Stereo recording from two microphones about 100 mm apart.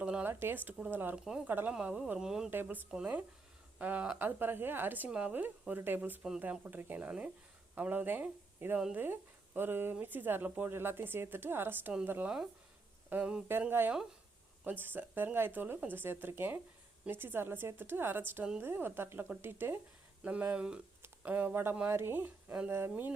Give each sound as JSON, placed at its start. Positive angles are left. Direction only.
{"t": 0.0, "sound": "a sound", "side_deg": -10}
{"t": 0.3, "sound": "a woman's voice", "side_deg": -20}
{"t": 1.1, "sound": "speech", "side_deg": -5}
{"t": 1.5, "sound": "a woman's voice", "side_deg": -20}
{"t": 1.7, "sound": "speech", "side_deg": -10}
{"t": 2.5, "sound": "a woman's voice", "side_deg": -20}